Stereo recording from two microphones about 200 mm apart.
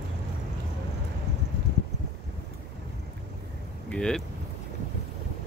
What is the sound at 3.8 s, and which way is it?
Vehicle, 5° left (ahead or behind).